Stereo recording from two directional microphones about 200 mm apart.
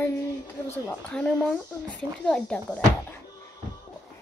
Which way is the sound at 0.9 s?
5° left (ahead or behind).